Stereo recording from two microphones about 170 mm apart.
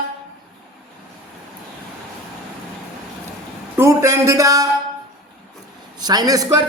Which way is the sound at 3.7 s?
15° right (ahead or behind).